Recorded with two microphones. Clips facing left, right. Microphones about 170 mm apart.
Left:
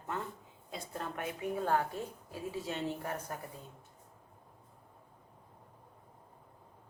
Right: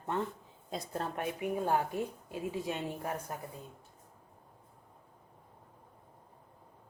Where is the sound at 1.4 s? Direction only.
15° right (ahead or behind).